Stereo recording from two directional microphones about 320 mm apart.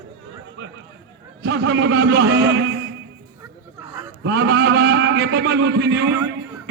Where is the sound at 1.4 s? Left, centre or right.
Right.